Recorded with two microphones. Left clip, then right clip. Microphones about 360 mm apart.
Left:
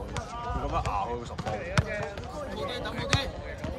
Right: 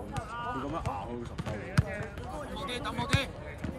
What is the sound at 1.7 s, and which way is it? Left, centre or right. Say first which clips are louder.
Basketball bounce: left 4 dB; left.